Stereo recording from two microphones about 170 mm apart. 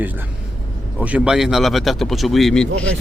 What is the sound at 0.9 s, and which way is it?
Speech, 5° right (ahead or behind).